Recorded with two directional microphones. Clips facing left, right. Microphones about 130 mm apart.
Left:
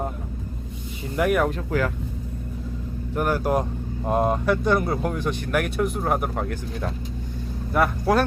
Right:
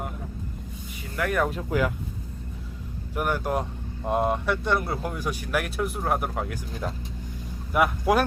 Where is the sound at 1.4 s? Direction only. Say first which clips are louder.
Left 2 dB; 5° right (ahead or behind).